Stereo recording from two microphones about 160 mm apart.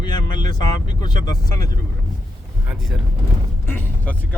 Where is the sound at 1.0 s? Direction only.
25° left (ahead or behind).